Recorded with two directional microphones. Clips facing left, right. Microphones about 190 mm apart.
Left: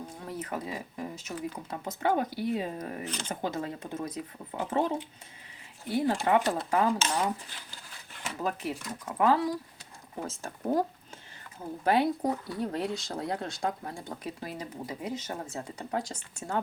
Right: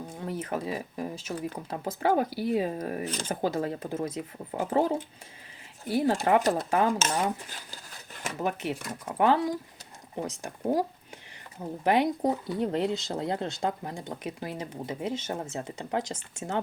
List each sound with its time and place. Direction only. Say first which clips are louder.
0.3 s speech: right 4 dB; 30° right (ahead or behind)
7.0 s speech: right 1 dB; 45° right (ahead or behind)
8.4 s speech: right 2 dB; 25° right (ahead or behind)
10.2 s speech: right 2 dB; 15° right (ahead or behind)